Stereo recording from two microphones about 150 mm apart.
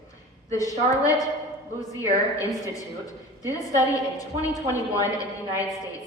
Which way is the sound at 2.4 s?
20° left (ahead or behind).